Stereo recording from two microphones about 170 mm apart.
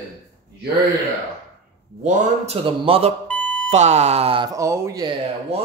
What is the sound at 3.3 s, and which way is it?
Alarm clock, 5° left (ahead or behind).